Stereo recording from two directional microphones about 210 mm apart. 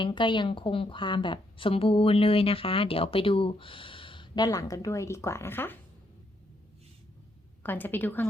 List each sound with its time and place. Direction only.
0.0 s a woman's voice: 20° left (ahead or behind)
7.6 s a woman's voice: 10° left (ahead or behind)